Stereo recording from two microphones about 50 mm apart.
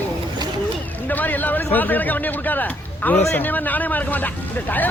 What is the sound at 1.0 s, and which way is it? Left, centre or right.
A man's voice, left.